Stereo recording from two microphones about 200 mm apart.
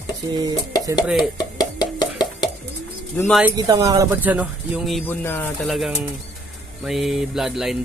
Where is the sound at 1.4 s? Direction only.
20° left (ahead or behind).